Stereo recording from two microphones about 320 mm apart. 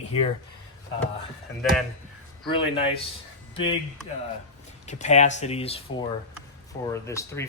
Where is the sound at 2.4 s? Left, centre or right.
Centre.